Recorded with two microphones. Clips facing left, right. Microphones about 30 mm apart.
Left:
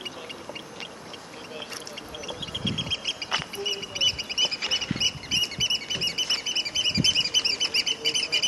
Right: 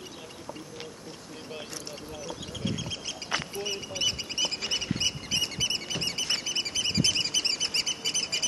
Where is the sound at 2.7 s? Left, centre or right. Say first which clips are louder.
Left 5 dB; left.